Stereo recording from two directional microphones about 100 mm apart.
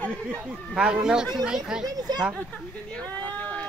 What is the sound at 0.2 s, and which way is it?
Speech, 10° right (ahead or behind).